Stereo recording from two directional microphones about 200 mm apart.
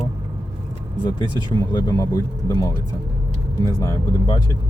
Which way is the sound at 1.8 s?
20° left (ahead or behind).